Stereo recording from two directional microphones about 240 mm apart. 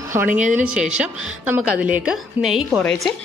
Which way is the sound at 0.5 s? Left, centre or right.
Centre.